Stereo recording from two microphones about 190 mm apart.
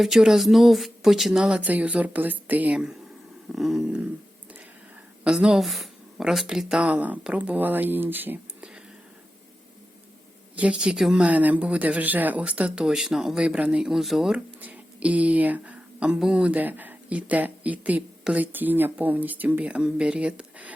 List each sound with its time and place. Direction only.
0.0 s speech: centre (ahead or behind)
5.2 s speech: 5° right (ahead or behind)
10.5 s speech: 5° right (ahead or behind)